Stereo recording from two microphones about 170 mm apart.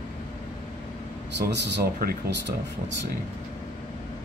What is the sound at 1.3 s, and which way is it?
Speech, 85° right.